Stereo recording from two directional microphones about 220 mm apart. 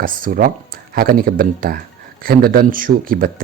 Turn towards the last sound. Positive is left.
turn(degrees=-40)  # may be behind; listen again after turning